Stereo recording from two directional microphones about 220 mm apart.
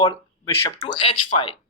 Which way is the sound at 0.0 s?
20° left (ahead or behind).